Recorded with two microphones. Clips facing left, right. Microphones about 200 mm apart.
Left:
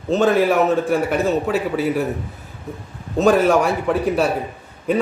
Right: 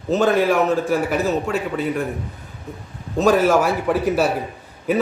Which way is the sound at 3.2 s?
Centre (ahead or behind).